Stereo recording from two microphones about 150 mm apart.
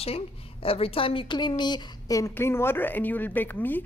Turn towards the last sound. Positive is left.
turn(degrees=15)  # may be behind; listen again after turning